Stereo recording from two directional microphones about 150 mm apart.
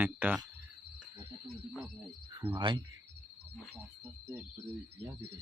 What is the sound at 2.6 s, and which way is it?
Speech, 30° right (ahead or behind).